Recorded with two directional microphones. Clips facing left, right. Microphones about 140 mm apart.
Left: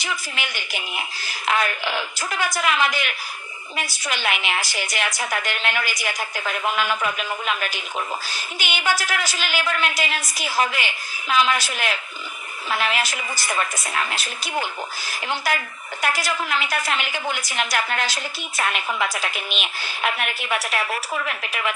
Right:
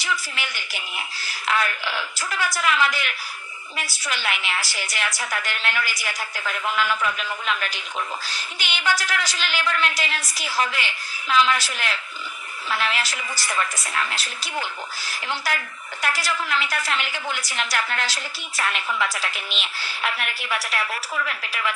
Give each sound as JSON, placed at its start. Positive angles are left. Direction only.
{"t": 0.0, "sound": "a woman's voice", "side_deg": 20}